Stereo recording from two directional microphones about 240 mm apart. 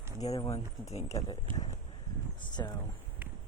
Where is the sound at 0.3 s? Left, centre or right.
Centre.